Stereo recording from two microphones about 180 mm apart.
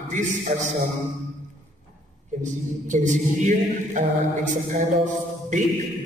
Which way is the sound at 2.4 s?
45° right (ahead or behind).